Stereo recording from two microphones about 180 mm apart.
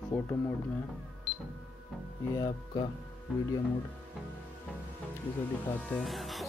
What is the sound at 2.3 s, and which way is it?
Speech, 25° left (ahead or behind).